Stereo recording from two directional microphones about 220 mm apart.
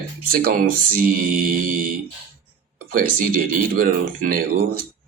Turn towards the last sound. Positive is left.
turn(degrees=-40)  # may be behind; listen again after turning